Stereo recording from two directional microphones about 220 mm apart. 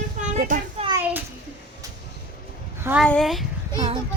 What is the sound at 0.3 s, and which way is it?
Children playing, 35° right (ahead or behind).